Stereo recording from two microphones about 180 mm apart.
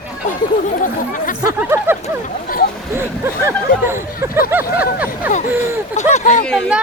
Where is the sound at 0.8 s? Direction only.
45° left (ahead or behind).